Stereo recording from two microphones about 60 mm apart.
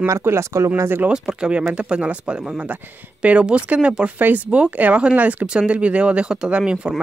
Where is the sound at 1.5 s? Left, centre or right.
Centre.